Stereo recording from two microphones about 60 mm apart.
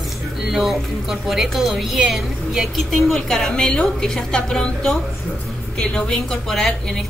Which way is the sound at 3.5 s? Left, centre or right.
Centre.